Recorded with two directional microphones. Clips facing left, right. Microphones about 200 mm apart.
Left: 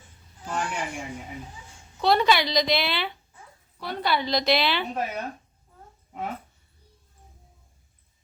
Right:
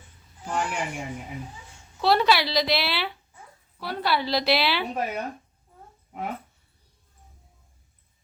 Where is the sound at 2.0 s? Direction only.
5° right (ahead or behind).